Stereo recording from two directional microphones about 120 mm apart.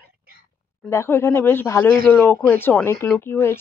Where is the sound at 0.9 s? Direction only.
20° left (ahead or behind).